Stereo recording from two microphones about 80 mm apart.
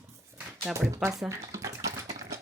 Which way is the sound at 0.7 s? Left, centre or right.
Right.